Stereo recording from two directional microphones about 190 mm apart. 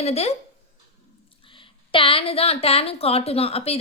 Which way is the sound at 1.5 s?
25° left (ahead or behind).